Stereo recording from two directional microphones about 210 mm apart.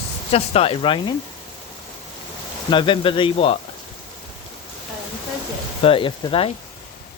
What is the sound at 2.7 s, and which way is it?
Speech, 25° left (ahead or behind).